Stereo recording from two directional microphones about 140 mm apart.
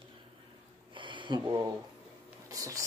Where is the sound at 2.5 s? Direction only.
25° right (ahead or behind).